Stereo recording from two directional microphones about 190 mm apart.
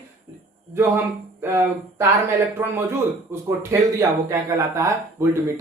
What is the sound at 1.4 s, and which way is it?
Speech, 15° right (ahead or behind).